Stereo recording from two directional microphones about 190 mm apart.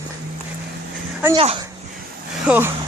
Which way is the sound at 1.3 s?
30° right (ahead or behind).